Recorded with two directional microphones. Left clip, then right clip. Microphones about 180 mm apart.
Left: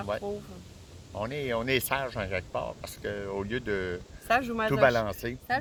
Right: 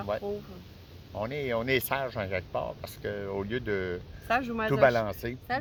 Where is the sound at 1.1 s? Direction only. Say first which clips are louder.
Even; 10° right (ahead or behind).